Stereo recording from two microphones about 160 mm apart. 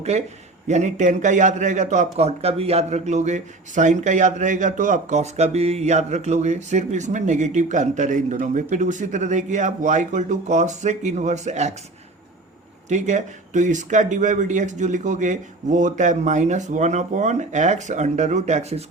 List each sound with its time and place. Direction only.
0.0 s a man's voice: 40° right (ahead or behind)
12.9 s a man's voice: 45° right (ahead or behind)